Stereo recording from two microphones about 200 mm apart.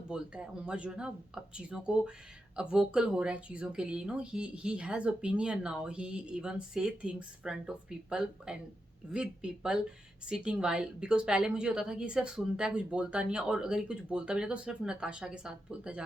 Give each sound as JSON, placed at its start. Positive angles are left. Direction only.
{"t": 0.1, "sound": "a woman's voice", "side_deg": -5}